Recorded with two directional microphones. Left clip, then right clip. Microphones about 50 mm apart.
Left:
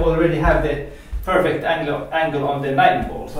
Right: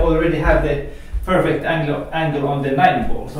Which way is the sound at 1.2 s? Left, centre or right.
Left.